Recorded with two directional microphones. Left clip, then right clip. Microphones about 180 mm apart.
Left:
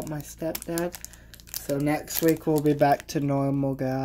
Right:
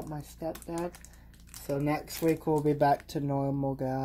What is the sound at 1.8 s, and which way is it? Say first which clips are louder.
Speech: left 5 dB; 10° left (ahead or behind).